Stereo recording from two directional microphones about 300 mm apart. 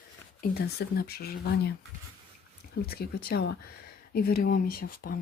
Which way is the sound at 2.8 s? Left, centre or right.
Left.